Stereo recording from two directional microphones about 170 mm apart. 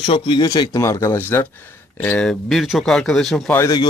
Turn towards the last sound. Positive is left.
turn(degrees=20)  # may be behind; listen again after turning